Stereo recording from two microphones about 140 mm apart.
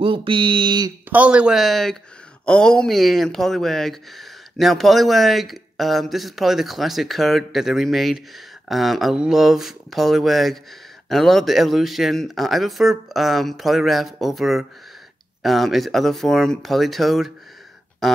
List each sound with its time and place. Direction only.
0.0 s speech: 35° right (ahead or behind)
1.1 s speech: 10° right (ahead or behind)